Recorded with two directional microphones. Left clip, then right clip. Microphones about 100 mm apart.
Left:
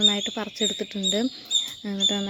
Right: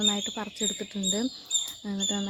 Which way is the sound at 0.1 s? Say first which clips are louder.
Left 4 dB; 25° left (ahead or behind).